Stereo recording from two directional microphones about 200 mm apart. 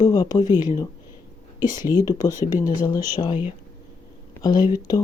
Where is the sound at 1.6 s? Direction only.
20° left (ahead or behind).